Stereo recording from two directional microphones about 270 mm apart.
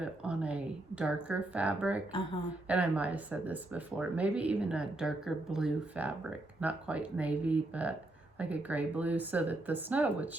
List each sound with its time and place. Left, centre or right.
0.0 s speech: centre